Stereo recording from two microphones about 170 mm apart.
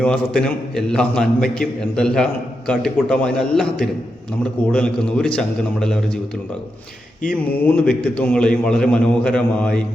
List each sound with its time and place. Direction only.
0.0 s a man's voice: 5° left (ahead or behind)
7.6 s a man's voice: 10° left (ahead or behind)